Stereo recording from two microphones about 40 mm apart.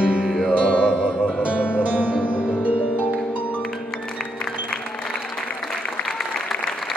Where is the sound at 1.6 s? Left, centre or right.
Left.